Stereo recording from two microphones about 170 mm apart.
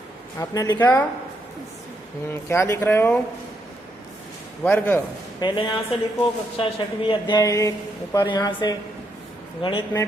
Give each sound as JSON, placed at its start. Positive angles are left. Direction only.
{"t": 0.3, "sound": "a woman's voice", "side_deg": 20}
{"t": 2.3, "sound": "speech", "side_deg": 15}
{"t": 4.6, "sound": "speech", "side_deg": 10}
{"t": 5.4, "sound": "a woman's voice", "side_deg": 30}